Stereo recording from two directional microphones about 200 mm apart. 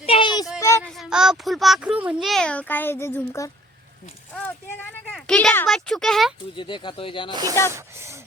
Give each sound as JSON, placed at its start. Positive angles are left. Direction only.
{"t": 0.0, "sound": "child singing", "side_deg": 25}
{"t": 0.9, "sound": "speech", "side_deg": 0}
{"t": 5.1, "sound": "speech", "side_deg": 5}
{"t": 6.6, "sound": "speech", "side_deg": 25}
{"t": 7.8, "sound": "speech", "side_deg": -15}